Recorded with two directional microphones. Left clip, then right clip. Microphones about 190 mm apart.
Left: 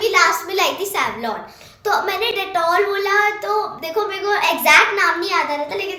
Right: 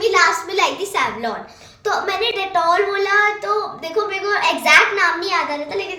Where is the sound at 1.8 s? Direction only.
Centre (ahead or behind).